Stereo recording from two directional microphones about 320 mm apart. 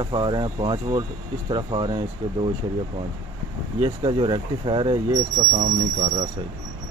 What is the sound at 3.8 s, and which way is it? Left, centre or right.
Speech, centre.